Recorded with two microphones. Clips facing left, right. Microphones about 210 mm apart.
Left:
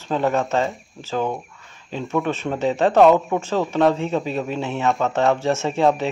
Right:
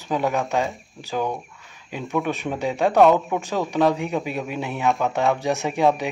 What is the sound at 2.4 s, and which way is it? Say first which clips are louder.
Speech: left 3 dB; 10° right (ahead or behind).